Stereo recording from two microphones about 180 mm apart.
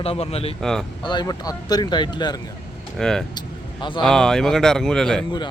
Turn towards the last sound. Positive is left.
turn(degrees=5)  # may be behind; listen again after turning